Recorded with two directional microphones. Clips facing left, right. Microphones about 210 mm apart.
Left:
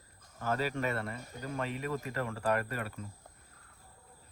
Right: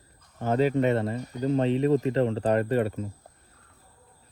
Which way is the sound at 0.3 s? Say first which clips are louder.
Right 10 dB; 25° right (ahead or behind).